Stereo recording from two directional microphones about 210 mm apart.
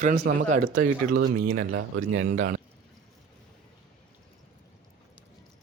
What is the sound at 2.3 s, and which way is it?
Speech, 40° right (ahead or behind).